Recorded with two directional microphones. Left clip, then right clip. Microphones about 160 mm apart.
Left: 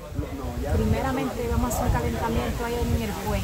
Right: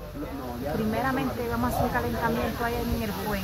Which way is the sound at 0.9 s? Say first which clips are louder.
Right 2 dB; 25° left (ahead or behind).